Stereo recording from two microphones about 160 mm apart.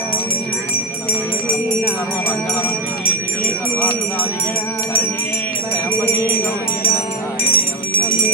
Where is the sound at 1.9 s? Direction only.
10° left (ahead or behind).